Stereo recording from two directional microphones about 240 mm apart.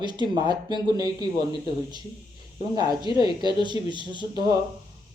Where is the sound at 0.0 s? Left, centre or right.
Centre.